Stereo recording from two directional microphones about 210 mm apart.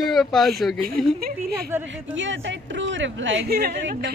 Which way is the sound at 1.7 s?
10° right (ahead or behind).